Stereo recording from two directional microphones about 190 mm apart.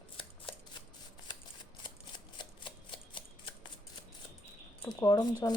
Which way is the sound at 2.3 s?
25° left (ahead or behind).